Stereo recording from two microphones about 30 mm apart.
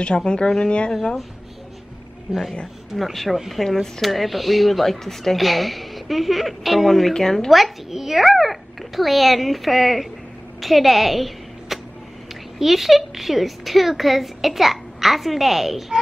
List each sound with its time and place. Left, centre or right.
0.0 s speech: left
3.0 s a woman's voice: centre
7.9 s a woman's voice: centre